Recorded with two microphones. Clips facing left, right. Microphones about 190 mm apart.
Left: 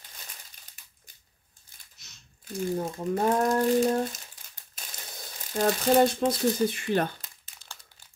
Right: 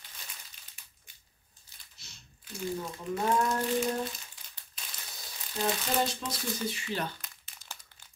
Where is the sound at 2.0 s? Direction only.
30° right (ahead or behind).